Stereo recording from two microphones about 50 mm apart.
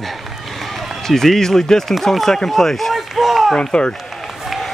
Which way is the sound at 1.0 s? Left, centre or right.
Centre.